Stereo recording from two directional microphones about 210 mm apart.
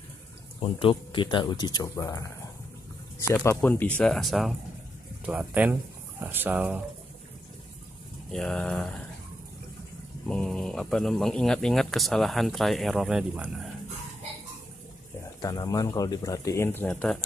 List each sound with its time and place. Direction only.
0.6 s speech: 25° left (ahead or behind)
3.3 s speech: 10° left (ahead or behind); by 6.8 s 10° right (ahead or behind)
8.3 s speech: 5° left (ahead or behind)
10.2 s speech: 5° left (ahead or behind)
15.4 s speech: 15° left (ahead or behind)